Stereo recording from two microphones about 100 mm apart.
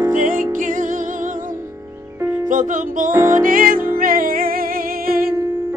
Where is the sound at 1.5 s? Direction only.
25° right (ahead or behind).